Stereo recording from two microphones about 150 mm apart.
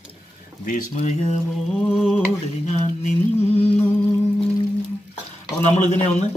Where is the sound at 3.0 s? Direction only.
50° left (ahead or behind).